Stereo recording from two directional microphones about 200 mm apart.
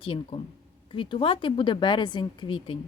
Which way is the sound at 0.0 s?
25° left (ahead or behind).